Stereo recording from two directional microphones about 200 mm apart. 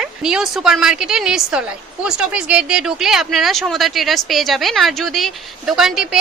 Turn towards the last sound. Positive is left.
turn(degrees=0)  # may be behind; listen again after turning